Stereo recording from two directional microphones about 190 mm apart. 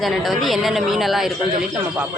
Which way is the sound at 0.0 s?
Centre (ahead or behind).